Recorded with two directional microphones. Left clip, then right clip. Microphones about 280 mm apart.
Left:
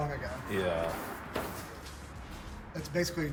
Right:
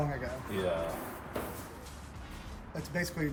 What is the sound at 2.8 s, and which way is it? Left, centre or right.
Speech, right.